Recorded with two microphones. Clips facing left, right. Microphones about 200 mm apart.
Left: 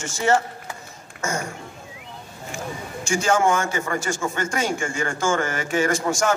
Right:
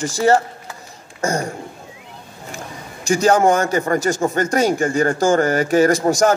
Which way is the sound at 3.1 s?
40° right (ahead or behind).